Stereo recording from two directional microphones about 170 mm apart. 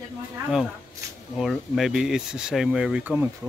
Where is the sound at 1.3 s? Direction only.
Centre (ahead or behind).